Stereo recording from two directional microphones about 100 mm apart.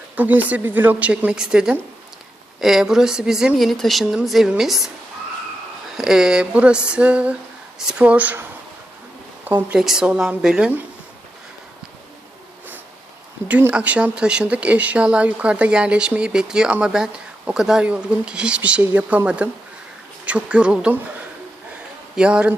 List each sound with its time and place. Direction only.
0.2 s speech: 15° right (ahead or behind)
6.0 s speech: 5° right (ahead or behind)
9.7 s speech: 5° right (ahead or behind)
13.5 s speech: 15° right (ahead or behind)
22.1 s a man's voice: 10° right (ahead or behind)